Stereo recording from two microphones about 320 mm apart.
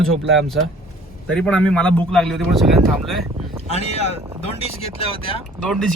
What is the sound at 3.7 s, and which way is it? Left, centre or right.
Speech, centre.